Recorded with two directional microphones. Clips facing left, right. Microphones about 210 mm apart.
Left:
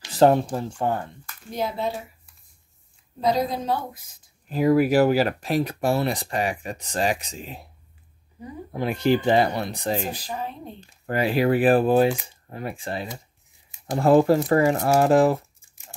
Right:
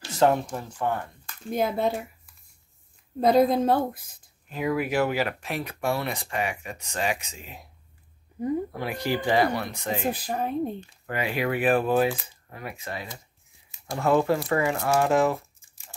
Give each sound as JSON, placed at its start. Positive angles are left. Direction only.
{"t": 0.1, "sound": "speech", "side_deg": 30}
{"t": 1.5, "sound": "a woman's voice", "side_deg": -50}
{"t": 3.2, "sound": "a woman's voice", "side_deg": -55}
{"t": 4.5, "sound": "speech", "side_deg": 35}
{"t": 8.7, "sound": "speech", "side_deg": 25}
{"t": 10.1, "sound": "a woman's voice", "side_deg": -55}
{"t": 10.9, "sound": "speech", "side_deg": 35}